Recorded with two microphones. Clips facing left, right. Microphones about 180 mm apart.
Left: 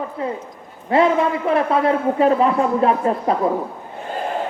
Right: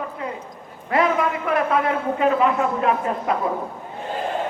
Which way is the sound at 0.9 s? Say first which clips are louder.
Left 4 dB; 30° left (ahead or behind).